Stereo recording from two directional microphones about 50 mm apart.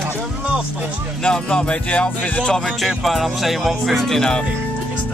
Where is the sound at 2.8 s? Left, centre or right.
Centre.